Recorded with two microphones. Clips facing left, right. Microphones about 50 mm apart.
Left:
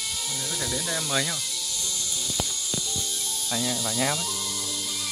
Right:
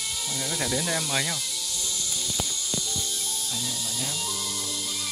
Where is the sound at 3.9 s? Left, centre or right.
Left.